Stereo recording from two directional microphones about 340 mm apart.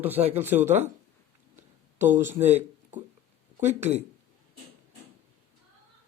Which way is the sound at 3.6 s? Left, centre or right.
Centre.